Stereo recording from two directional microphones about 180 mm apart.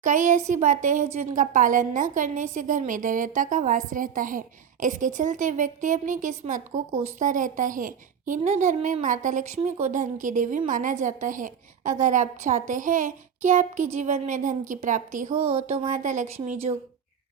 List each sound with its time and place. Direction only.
0.0 s speech: 45° right (ahead or behind)